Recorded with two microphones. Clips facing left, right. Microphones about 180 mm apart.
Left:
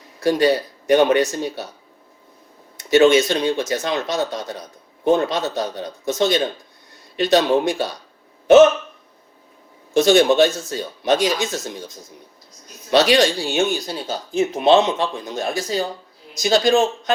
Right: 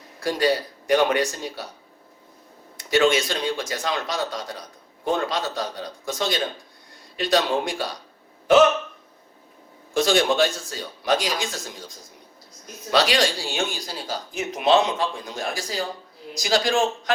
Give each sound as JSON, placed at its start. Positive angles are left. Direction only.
{"t": 0.2, "sound": "speech", "side_deg": 25}
{"t": 2.7, "sound": "speech", "side_deg": 25}
{"t": 9.9, "sound": "speech", "side_deg": 25}
{"t": 12.9, "sound": "speech", "side_deg": 25}